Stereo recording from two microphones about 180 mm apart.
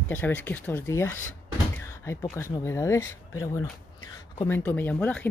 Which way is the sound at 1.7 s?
15° left (ahead or behind).